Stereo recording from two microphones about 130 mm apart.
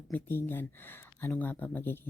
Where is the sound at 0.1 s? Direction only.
15° left (ahead or behind).